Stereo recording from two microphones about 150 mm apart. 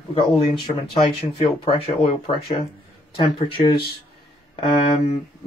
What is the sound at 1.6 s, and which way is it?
Speech, 40° left (ahead or behind).